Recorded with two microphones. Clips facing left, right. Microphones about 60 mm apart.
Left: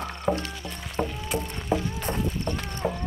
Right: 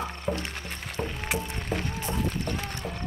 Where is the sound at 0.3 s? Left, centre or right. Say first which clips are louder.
Left 5 dB; centre.